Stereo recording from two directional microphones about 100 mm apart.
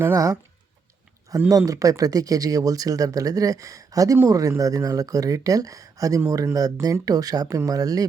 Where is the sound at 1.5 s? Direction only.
35° right (ahead or behind).